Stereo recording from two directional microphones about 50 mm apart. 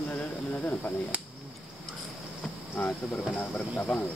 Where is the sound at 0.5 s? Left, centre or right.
Left.